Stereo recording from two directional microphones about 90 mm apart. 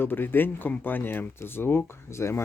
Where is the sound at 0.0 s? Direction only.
25° left (ahead or behind).